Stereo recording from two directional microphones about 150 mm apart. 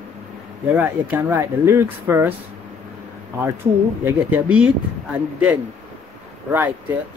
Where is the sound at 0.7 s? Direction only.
15° right (ahead or behind).